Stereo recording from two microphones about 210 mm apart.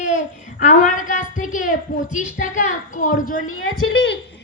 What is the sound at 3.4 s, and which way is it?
Speech, 80° left.